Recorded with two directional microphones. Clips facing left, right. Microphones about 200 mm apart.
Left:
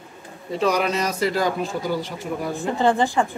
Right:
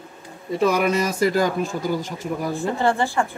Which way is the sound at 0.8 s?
50° right (ahead or behind).